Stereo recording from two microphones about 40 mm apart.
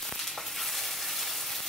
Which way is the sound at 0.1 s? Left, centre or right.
Centre.